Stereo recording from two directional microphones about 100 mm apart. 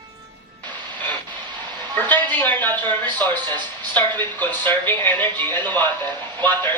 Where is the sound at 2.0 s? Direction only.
20° left (ahead or behind).